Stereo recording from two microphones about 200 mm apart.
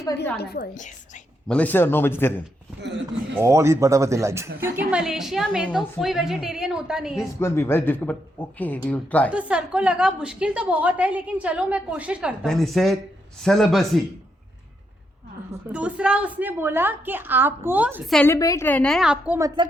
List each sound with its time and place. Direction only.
0.3 s a woman's voice: 50° left (ahead or behind)
0.7 s a woman's voice: 35° left (ahead or behind)
1.5 s speech: 5° left (ahead or behind)
2.8 s speech: 60° right (ahead or behind)
3.4 s a woman's voice: 15° right (ahead or behind)
4.9 s a woman's voice: 5° right (ahead or behind)
7.3 s speech: 10° left (ahead or behind)
9.3 s a woman's voice: 5° right (ahead or behind)
15.7 s a woman's voice: 5° right (ahead or behind)
18.3 s a woman's voice: 15° left (ahead or behind); by 19.5 s 5° right (ahead or behind)